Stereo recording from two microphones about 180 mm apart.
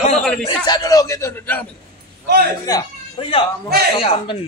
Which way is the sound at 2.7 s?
20° left (ahead or behind).